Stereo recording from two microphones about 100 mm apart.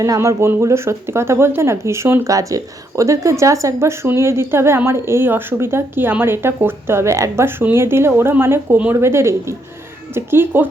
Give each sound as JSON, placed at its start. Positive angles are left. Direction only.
{"t": 0.0, "sound": "a woman's voice", "side_deg": -30}